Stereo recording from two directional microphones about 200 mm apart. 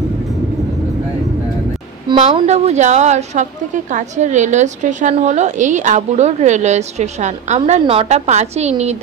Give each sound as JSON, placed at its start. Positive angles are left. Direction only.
{"t": 2.1, "sound": "a woman's voice", "side_deg": -35}